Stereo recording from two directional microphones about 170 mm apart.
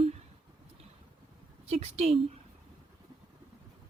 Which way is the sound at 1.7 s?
40° right (ahead or behind).